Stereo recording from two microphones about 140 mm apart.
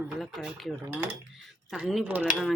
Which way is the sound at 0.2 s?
Centre (ahead or behind).